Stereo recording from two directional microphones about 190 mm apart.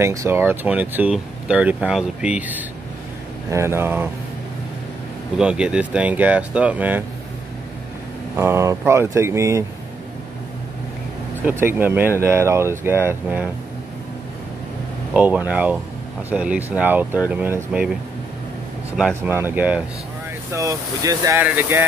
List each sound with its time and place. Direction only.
0.0 s speech: 15° right (ahead or behind)
5.4 s speech: 5° right (ahead or behind)
8.4 s speech: 15° right (ahead or behind)
11.4 s speech: 10° right (ahead or behind)
15.1 s speech: 10° right (ahead or behind)
18.9 s speech: 5° right (ahead or behind)